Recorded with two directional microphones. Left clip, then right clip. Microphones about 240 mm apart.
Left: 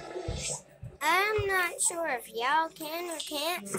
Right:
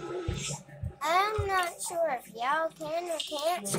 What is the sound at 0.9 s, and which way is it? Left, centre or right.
A child's voice, left.